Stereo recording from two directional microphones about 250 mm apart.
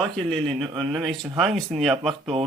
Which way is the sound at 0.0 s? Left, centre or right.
Centre.